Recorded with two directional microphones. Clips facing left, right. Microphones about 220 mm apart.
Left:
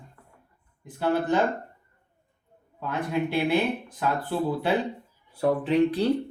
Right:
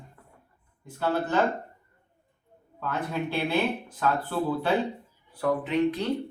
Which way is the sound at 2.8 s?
15° left (ahead or behind).